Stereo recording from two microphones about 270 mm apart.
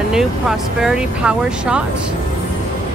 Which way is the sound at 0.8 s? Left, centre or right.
Centre.